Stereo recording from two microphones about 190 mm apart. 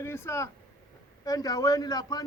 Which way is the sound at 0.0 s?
15° left (ahead or behind).